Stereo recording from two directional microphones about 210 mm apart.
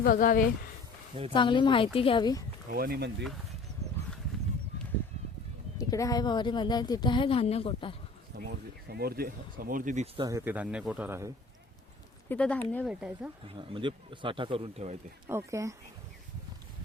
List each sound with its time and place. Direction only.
0.0 s speech: 40° left (ahead or behind)
1.3 s speech: 25° left (ahead or behind)
2.6 s speech: 45° right (ahead or behind)
5.7 s speech: 15° left (ahead or behind)
8.4 s speech: 50° right (ahead or behind)
10.2 s speech: 15° right (ahead or behind)
12.3 s speech: 5° left (ahead or behind)
13.5 s speech: 25° right (ahead or behind)
15.3 s speech: 15° right (ahead or behind)